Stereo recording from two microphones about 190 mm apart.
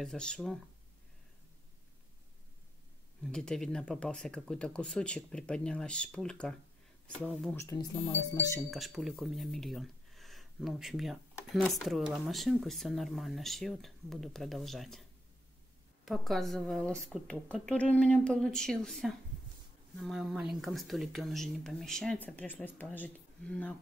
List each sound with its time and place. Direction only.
0.0 s speech: 5° left (ahead or behind)
3.3 s speech: 5° left (ahead or behind)
7.5 s speech: 15° left (ahead or behind)
8.5 s speech: centre (ahead or behind)
16.1 s speech: centre (ahead or behind)